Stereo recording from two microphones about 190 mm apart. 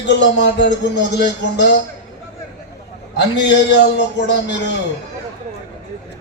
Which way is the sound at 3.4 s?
65° left (ahead or behind).